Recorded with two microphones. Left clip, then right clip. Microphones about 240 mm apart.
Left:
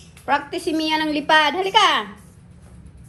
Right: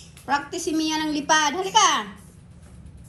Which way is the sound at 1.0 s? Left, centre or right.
Centre.